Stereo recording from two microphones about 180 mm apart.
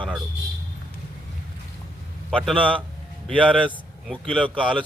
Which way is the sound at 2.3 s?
5° left (ahead or behind).